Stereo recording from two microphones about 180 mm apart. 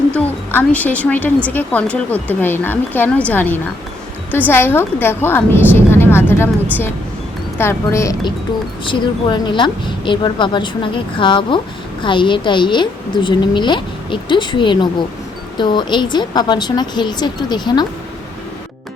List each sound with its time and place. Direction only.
0.1 s a woman's voice: 10° left (ahead or behind)
7.6 s a woman's voice: 15° left (ahead or behind)
8.8 s a woman's voice: 25° left (ahead or behind)